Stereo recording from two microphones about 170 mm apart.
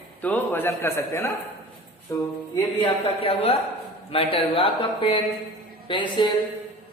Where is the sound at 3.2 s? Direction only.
35° left (ahead or behind).